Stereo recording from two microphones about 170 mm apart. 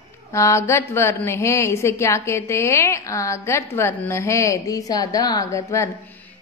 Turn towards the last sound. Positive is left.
turn(degrees=15)  # may be behind; listen again after turning